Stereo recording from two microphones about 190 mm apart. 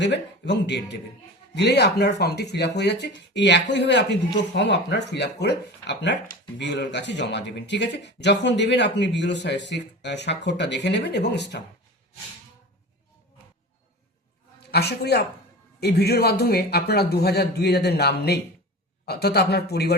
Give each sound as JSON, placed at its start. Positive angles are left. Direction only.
{"t": 0.0, "sound": "speech", "side_deg": 65}
{"t": 14.7, "sound": "speech", "side_deg": 60}